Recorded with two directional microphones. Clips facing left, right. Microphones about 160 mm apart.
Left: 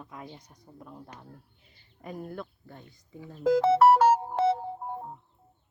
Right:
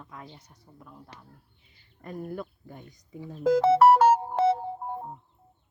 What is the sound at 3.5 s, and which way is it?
Music, 55° right (ahead or behind).